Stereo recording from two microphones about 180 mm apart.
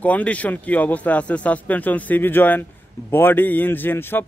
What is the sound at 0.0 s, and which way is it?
Speech, 10° left (ahead or behind).